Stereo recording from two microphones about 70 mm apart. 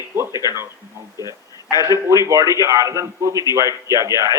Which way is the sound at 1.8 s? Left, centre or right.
Right.